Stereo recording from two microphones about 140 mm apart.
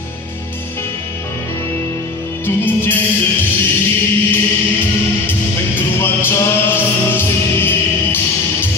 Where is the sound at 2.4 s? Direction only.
15° left (ahead or behind).